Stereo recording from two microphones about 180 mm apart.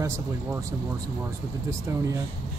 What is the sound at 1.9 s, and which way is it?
Speech, 15° right (ahead or behind).